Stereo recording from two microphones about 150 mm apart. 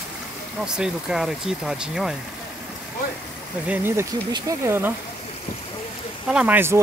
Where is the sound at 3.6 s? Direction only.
15° right (ahead or behind).